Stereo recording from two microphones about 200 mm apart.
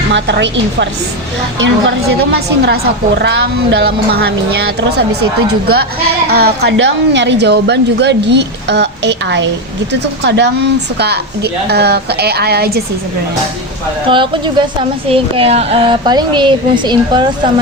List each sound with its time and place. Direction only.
0.1 s a woman's voice: 60° right (ahead or behind)
6.2 s a woman's voice: 55° right (ahead or behind)
14.1 s a woman's voice: 25° right (ahead or behind)